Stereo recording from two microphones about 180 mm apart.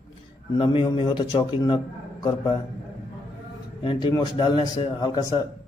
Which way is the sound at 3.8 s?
25° left (ahead or behind).